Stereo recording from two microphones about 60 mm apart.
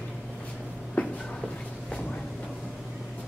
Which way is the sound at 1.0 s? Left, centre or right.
Left.